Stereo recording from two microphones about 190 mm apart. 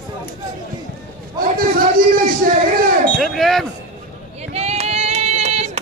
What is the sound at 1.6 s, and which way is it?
Speech, 50° right (ahead or behind).